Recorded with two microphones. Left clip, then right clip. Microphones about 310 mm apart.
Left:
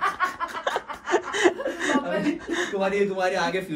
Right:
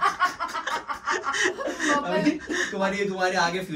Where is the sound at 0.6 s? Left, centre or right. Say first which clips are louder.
Left 1 dB; centre.